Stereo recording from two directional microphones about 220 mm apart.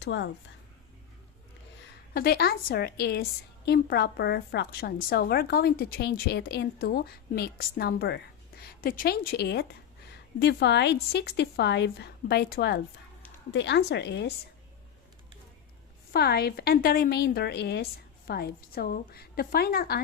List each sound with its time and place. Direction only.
0.0 s a woman's voice: 55° left (ahead or behind)
2.1 s a woman's voice: 45° left (ahead or behind)
16.1 s a woman's voice: 45° left (ahead or behind)